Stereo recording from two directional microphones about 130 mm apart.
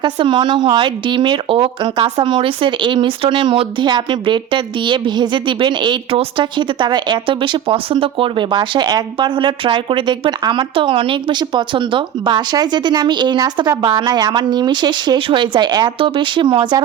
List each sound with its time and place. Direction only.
0.0 s speech: 35° right (ahead or behind)